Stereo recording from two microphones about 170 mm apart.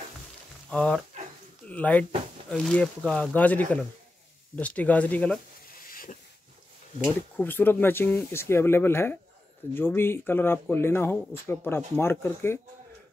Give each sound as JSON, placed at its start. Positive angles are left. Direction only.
{"t": 0.7, "sound": "speech", "side_deg": 5}
{"t": 5.8, "sound": "a sound", "side_deg": 55}
{"t": 7.3, "sound": "speech", "side_deg": 10}